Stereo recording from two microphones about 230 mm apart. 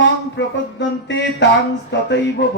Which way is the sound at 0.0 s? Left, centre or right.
Left.